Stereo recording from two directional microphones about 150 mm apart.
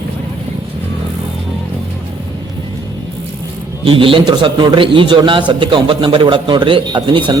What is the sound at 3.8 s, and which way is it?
A man's voice, 35° right (ahead or behind).